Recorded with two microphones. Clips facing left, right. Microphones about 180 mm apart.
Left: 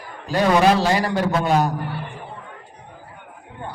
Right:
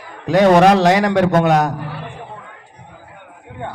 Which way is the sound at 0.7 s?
85° right.